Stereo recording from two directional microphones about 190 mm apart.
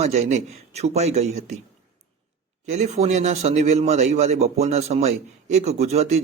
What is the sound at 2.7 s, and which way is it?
Speech, 35° right (ahead or behind).